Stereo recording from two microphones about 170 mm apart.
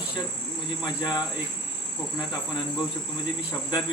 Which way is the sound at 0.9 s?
25° left (ahead or behind).